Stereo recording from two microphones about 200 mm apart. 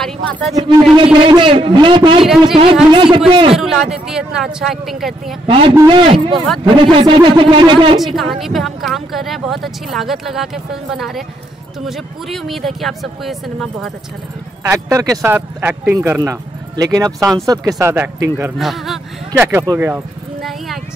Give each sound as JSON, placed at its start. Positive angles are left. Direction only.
{"t": 0.0, "sound": "speech", "side_deg": 0}
{"t": 0.9, "sound": "speech", "side_deg": -25}
{"t": 3.5, "sound": "speech", "side_deg": 0}
{"t": 5.5, "sound": "speech", "side_deg": -25}
{"t": 8.0, "sound": "speech", "side_deg": 0}
{"t": 14.6, "sound": "speech", "side_deg": -15}
{"t": 18.6, "sound": "a sound", "side_deg": 0}
{"t": 19.4, "sound": "speech", "side_deg": -15}
{"t": 20.4, "sound": "vehicle", "side_deg": 0}